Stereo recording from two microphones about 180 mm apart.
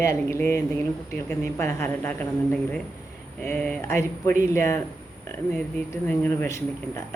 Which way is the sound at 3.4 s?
10° left (ahead or behind).